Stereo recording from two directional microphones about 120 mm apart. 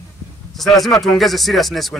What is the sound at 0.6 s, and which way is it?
A man's voice, centre (ahead or behind).